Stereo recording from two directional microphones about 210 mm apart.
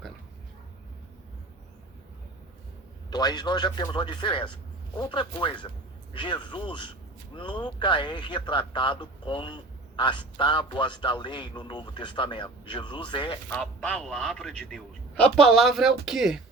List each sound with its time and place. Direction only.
3.1 s a man's voice: 20° left (ahead or behind)
13.5 s a man's voice: 5° left (ahead or behind)